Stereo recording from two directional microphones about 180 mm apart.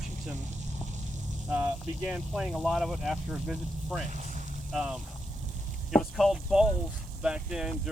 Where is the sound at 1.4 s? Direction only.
10° right (ahead or behind).